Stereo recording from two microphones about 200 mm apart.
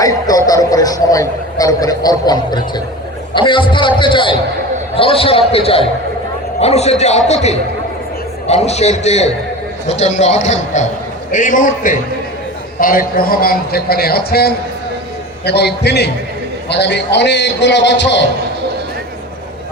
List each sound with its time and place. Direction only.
0.0 s a man's voice: 15° left (ahead or behind); by 18.2 s 60° left (ahead or behind)